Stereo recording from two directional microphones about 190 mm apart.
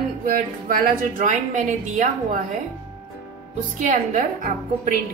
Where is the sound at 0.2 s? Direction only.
45° right (ahead or behind).